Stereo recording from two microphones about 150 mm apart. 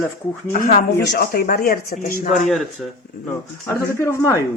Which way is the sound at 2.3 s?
Centre (ahead or behind).